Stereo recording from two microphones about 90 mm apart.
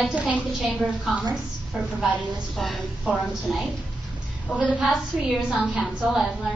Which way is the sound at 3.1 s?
15° right (ahead or behind).